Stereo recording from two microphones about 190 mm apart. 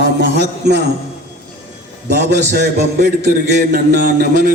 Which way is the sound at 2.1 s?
60° right (ahead or behind).